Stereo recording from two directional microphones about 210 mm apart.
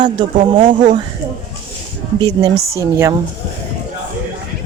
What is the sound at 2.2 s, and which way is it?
Speech, 20° right (ahead or behind).